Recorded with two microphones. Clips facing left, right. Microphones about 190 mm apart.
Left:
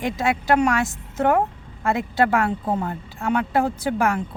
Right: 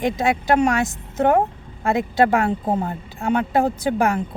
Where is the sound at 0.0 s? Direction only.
15° right (ahead or behind).